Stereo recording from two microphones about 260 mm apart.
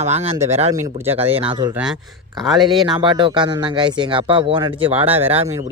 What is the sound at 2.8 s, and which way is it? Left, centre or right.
Speech, centre.